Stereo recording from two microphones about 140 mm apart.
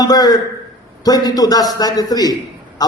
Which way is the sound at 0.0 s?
25° left (ahead or behind).